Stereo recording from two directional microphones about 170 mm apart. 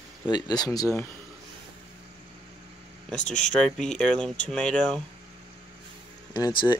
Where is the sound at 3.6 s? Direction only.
5° left (ahead or behind).